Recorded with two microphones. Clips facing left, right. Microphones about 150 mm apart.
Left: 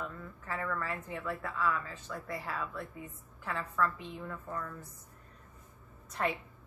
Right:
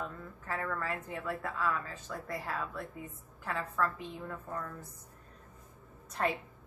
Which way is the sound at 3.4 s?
40° right (ahead or behind).